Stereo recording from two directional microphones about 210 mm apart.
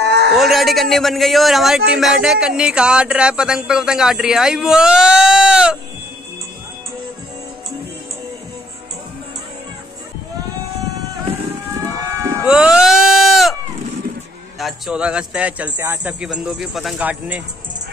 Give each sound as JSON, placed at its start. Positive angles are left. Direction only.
{"t": 0.0, "sound": "livestock", "side_deg": -50}
{"t": 0.4, "sound": "speech", "side_deg": 0}
{"t": 11.8, "sound": "sheep", "side_deg": -15}
{"t": 14.6, "sound": "speech", "side_deg": 0}